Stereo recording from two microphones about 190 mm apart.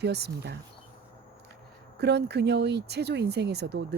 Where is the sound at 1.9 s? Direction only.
60° right (ahead or behind).